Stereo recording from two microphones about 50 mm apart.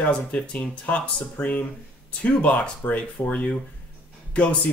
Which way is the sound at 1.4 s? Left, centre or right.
Left.